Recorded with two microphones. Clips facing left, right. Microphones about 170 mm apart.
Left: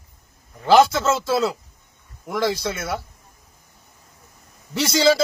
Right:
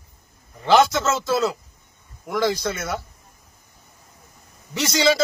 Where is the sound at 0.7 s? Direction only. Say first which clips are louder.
Left 2 dB; 5° left (ahead or behind).